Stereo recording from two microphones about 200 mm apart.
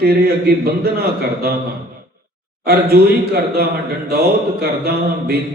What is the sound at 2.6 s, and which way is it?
A man's voice, 50° right (ahead or behind).